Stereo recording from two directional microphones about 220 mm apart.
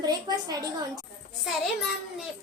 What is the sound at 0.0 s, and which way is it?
A woman's voice, 15° right (ahead or behind).